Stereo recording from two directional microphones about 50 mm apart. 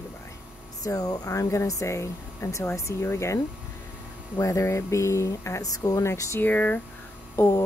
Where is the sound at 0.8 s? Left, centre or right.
Left.